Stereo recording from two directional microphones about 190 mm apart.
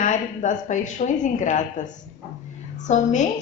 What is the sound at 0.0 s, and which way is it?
A woman's voice, 40° left (ahead or behind).